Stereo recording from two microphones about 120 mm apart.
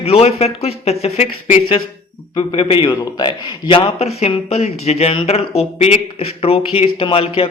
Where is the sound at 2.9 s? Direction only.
35° left (ahead or behind).